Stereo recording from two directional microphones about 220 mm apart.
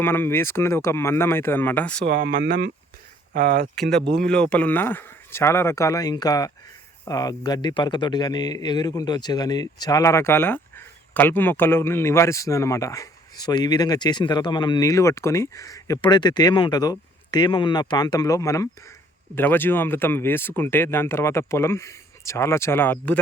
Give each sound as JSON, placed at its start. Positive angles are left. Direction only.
{"t": 0.0, "sound": "speech", "side_deg": 10}
{"t": 2.0, "sound": "speech", "side_deg": -40}
{"t": 4.3, "sound": "speech", "side_deg": 5}